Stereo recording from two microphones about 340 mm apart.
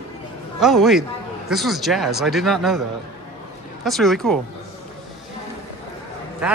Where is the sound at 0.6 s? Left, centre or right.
Centre.